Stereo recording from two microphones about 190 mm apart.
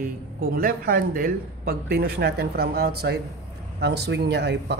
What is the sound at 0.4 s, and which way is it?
Speech, 50° right (ahead or behind).